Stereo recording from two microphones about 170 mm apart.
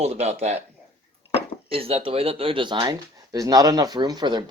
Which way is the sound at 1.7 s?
35° right (ahead or behind).